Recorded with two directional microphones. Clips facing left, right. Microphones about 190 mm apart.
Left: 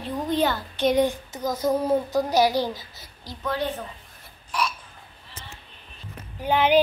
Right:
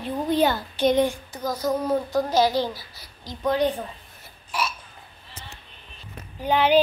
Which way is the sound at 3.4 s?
15° right (ahead or behind).